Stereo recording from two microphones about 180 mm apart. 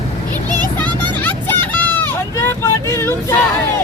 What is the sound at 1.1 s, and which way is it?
Vehicle, 10° left (ahead or behind).